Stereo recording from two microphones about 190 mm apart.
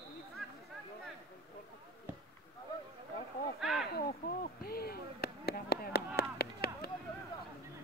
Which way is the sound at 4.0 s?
50° left (ahead or behind).